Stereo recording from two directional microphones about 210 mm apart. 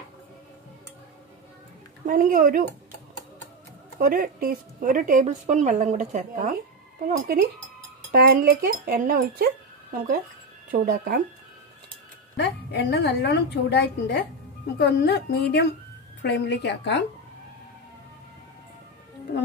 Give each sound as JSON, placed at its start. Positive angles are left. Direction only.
{"t": 2.0, "sound": "a woman's voice", "side_deg": -40}
{"t": 4.0, "sound": "a woman's voice", "side_deg": -40}
{"t": 7.1, "sound": "speech", "side_deg": -45}
{"t": 12.4, "sound": "a woman's voice", "side_deg": 55}